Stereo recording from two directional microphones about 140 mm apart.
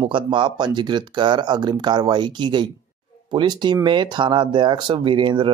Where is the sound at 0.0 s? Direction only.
35° right (ahead or behind).